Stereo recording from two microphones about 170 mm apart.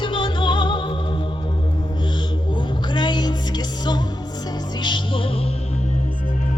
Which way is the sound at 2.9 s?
25° left (ahead or behind).